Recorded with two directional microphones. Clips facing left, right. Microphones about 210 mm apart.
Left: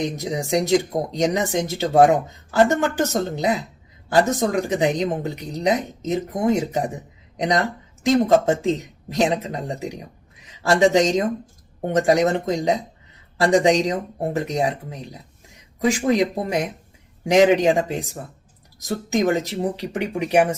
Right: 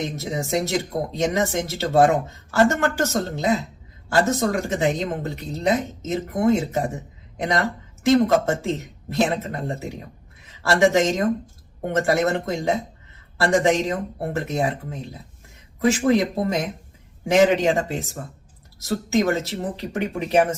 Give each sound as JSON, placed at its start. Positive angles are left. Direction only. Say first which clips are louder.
{"t": 0.0, "sound": "speech", "louder": "left 2 dB", "side_deg": 15}